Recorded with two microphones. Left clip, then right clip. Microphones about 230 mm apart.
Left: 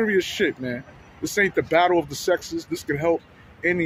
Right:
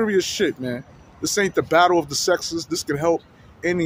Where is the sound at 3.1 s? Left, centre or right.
Centre.